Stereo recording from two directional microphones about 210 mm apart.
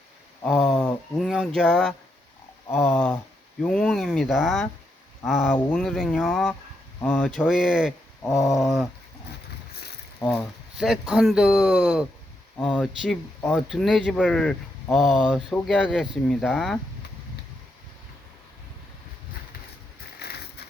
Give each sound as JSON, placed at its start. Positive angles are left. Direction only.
{"t": 0.4, "sound": "speech", "side_deg": 5}
{"t": 10.2, "sound": "speech", "side_deg": 10}
{"t": 10.8, "sound": "a man's voice", "side_deg": -5}
{"t": 20.1, "sound": "a sound", "side_deg": 50}